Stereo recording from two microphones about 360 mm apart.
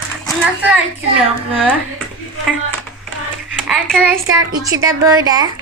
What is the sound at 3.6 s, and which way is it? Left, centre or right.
A child's voice, centre.